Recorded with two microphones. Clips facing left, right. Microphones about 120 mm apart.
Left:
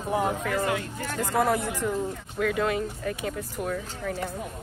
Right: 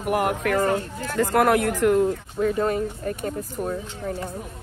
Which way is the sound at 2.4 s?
35° right (ahead or behind).